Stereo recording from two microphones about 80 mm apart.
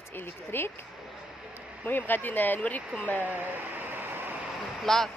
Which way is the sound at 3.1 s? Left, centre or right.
Right.